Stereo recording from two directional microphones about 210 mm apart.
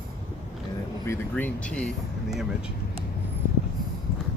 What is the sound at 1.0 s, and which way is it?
Speech, 10° left (ahead or behind).